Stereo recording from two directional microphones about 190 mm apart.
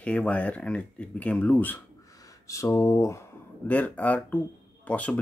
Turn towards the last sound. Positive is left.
turn(degrees=5)  # may be behind; listen again after turning